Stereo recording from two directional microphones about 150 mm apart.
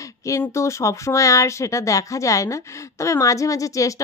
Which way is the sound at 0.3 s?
20° left (ahead or behind).